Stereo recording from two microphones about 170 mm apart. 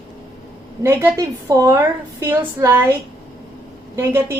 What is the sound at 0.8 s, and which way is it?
A woman's voice, 15° right (ahead or behind).